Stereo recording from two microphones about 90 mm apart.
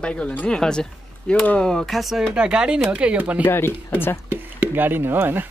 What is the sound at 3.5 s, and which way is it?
Speech, 25° left (ahead or behind).